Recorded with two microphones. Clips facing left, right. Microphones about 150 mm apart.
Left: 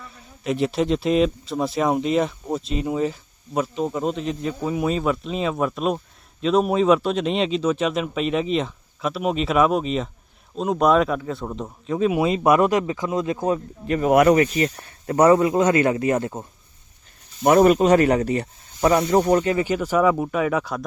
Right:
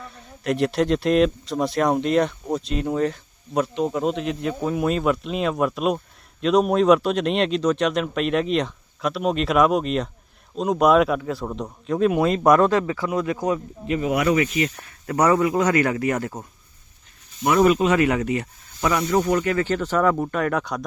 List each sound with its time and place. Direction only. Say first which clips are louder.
0.0 s speech: right 1 dB; centre (ahead or behind); by 13.6 s 25° left (ahead or behind)
13.8 s speech: left 6 dB; 45° left (ahead or behind); by 16.5 s 25° left (ahead or behind)
17.4 s speech: left 3 dB; 45° left (ahead or behind); by 19.6 s 25° left (ahead or behind)
19.6 s speech: left 1 dB; 10° left (ahead or behind)